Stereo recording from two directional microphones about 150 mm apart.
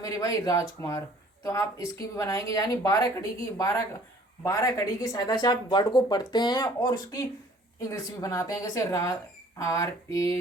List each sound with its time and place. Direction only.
0.0 s speech: 25° left (ahead or behind)